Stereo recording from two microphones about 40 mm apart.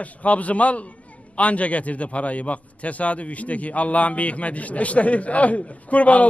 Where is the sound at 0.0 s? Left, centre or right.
Left.